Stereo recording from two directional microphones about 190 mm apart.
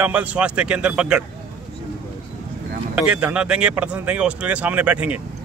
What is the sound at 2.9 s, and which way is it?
Speech, 5° right (ahead or behind).